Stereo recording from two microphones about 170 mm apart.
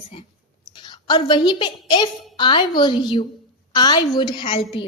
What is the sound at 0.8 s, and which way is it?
A woman's voice, 25° left (ahead or behind).